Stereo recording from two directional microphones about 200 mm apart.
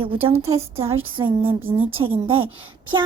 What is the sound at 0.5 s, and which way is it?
Speech, 15° right (ahead or behind).